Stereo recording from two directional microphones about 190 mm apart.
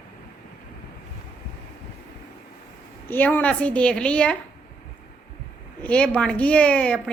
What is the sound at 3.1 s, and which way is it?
A woman's voice, 10° left (ahead or behind).